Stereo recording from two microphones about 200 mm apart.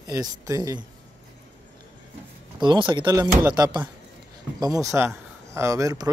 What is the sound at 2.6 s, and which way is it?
Speech, 25° right (ahead or behind).